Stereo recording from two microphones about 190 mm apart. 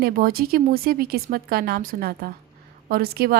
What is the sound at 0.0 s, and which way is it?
Speech, 50° right (ahead or behind).